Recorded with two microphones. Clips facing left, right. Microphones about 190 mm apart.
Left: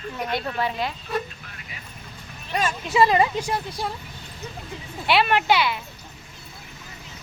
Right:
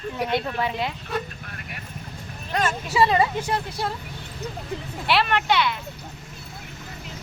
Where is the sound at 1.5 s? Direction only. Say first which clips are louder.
Right 4 dB; 55° right (ahead or behind).